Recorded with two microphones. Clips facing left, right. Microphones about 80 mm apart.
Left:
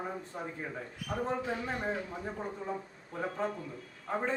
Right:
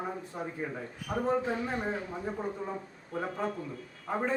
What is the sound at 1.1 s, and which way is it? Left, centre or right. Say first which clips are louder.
Speech: right 4 dB; right.